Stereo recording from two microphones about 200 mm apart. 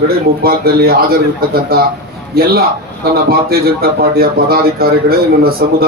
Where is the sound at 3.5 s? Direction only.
50° right (ahead or behind).